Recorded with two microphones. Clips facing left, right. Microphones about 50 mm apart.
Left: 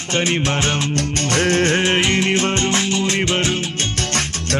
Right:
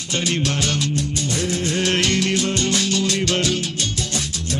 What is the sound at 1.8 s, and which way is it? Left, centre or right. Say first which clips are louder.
Music: left 3 dB; left.